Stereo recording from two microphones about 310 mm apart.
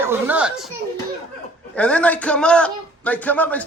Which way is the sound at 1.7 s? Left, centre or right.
Centre.